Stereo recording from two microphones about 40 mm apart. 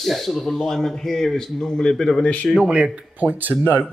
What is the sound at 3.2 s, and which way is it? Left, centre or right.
Speech, right.